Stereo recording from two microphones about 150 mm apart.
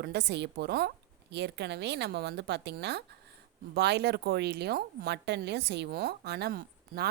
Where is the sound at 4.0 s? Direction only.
90° right.